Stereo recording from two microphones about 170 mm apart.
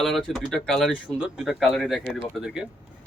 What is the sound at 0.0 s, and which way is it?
Speech, centre (ahead or behind).